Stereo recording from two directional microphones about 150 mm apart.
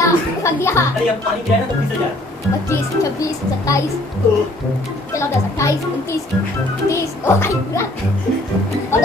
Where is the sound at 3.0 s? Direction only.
20° left (ahead or behind).